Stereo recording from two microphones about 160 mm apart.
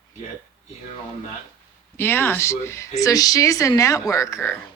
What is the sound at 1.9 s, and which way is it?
A woman's voice, 15° left (ahead or behind).